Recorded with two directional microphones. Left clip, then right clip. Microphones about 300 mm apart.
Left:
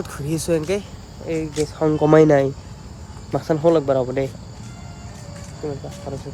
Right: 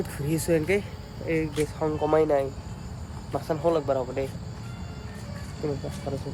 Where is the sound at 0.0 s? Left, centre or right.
Centre.